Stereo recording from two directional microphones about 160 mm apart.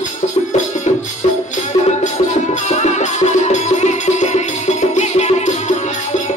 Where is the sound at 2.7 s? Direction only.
45° left (ahead or behind).